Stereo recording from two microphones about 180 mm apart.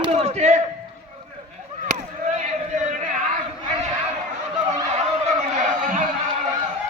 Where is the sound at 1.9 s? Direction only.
40° right (ahead or behind).